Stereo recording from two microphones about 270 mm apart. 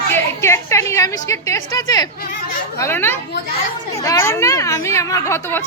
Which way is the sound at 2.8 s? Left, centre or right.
Centre.